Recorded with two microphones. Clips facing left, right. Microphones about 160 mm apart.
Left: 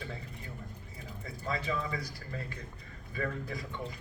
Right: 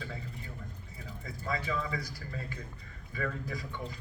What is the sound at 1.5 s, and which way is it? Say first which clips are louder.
Speech: even; 25° left (ahead or behind).